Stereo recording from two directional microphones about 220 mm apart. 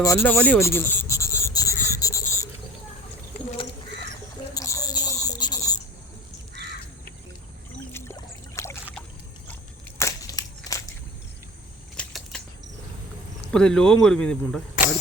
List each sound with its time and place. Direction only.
0.0 s insect: 10° left (ahead or behind)
4.5 s rodents: 15° left (ahead or behind)
7.9 s boat: 10° left (ahead or behind)
10.0 s a sound: 15° left (ahead or behind)
11.9 s a sound: 5° left (ahead or behind)
13.5 s speech: 5° left (ahead or behind)